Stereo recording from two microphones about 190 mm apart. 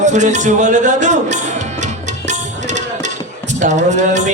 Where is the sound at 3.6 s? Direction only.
40° right (ahead or behind).